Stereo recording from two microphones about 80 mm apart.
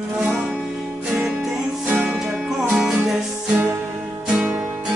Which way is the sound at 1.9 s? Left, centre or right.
Right.